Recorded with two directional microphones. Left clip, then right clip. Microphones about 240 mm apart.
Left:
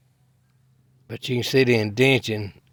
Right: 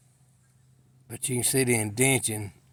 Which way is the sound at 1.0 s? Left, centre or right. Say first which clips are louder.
Left 5 dB; left.